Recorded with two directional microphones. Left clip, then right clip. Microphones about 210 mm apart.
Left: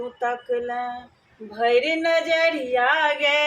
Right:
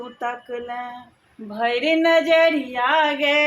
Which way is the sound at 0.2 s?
40° right (ahead or behind).